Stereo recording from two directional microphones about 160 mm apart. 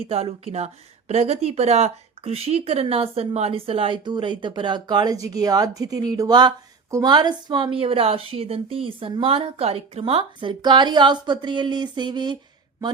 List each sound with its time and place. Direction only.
0.0 s a woman's voice: 40° right (ahead or behind)